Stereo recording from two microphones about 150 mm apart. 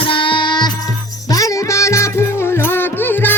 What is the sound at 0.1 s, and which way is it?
Music, 35° left (ahead or behind).